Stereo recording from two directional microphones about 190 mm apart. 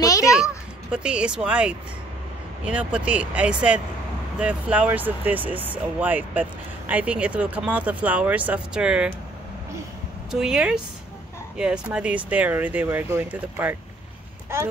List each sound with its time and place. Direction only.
0.0 s a sound: 15° left (ahead or behind)
0.9 s speech: 5° right (ahead or behind)
10.3 s speech: 5° right (ahead or behind)